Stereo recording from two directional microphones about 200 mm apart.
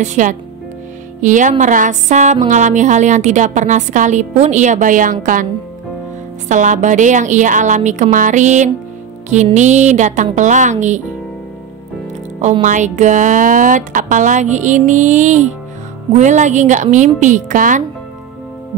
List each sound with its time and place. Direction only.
0.0 s speech: 35° right (ahead or behind)
6.5 s speech: 40° right (ahead or behind)
12.4 s speech: 35° right (ahead or behind)